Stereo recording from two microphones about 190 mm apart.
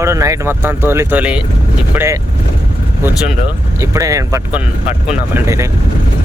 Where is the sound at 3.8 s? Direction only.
15° right (ahead or behind).